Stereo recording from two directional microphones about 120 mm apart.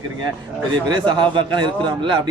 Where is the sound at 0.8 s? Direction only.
40° right (ahead or behind).